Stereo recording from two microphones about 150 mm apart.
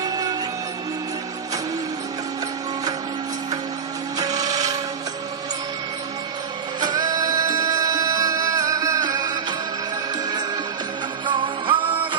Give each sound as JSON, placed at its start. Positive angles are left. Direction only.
{"t": 0.0, "sound": "music", "side_deg": -25}
{"t": 4.2, "sound": "a sound", "side_deg": -25}
{"t": 6.7, "sound": "music", "side_deg": -30}
{"t": 11.3, "sound": "music", "side_deg": -30}